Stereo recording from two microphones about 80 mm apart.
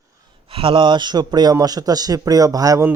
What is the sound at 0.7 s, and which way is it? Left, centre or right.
Speech, right.